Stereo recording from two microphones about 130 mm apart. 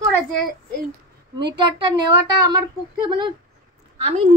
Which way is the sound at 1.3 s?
40° right (ahead or behind).